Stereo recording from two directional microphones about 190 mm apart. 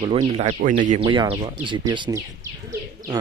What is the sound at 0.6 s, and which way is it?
Speech, 45° right (ahead or behind).